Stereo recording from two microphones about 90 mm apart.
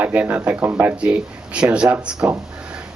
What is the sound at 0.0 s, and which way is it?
Speech, 15° right (ahead or behind).